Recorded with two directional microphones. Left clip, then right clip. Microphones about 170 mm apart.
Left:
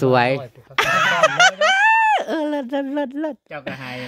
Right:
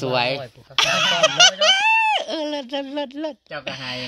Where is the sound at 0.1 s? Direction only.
70° left (ahead or behind).